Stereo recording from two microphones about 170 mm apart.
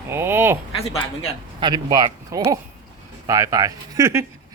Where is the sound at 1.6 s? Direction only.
25° right (ahead or behind).